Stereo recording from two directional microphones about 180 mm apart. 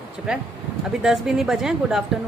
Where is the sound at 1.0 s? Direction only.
5° right (ahead or behind).